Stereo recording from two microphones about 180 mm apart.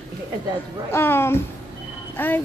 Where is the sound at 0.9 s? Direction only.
15° left (ahead or behind).